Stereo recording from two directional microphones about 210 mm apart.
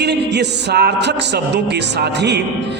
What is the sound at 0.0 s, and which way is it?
Speech, 50° right (ahead or behind).